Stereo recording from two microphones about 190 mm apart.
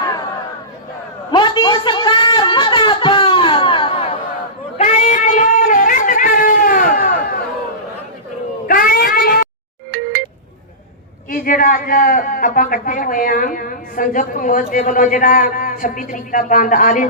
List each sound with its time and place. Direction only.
1.3 s a sound: 25° left (ahead or behind); by 7.2 s 50° left (ahead or behind)
8.6 s cat: 50° left (ahead or behind)
11.3 s a man's voice: 50° left (ahead or behind)